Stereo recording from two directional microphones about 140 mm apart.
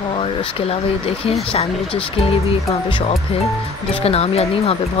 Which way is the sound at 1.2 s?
45° left (ahead or behind).